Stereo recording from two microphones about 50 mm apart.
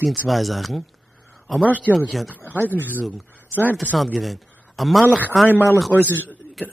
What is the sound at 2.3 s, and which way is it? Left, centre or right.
Speech, right.